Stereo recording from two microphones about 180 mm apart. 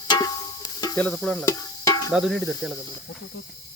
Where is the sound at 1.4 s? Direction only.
20° left (ahead or behind).